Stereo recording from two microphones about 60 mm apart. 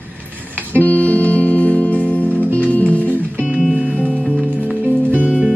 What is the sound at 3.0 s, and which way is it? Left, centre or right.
Music, right.